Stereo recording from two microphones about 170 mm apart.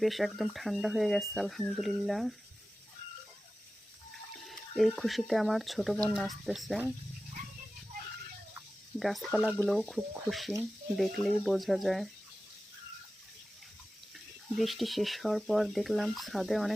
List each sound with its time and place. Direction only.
0.0 s speech: centre (ahead or behind)
4.1 s speech: centre (ahead or behind)
9.0 s speech: centre (ahead or behind)
14.5 s speech: centre (ahead or behind)